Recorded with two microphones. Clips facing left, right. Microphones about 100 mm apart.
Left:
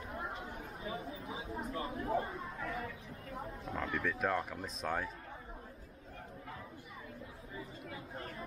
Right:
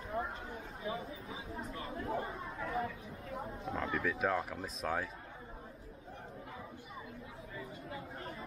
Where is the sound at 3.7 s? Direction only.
5° right (ahead or behind).